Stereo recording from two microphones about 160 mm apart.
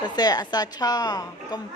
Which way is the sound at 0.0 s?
25° left (ahead or behind).